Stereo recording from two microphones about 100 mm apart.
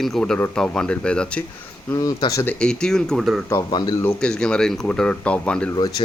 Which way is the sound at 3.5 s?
45° left (ahead or behind).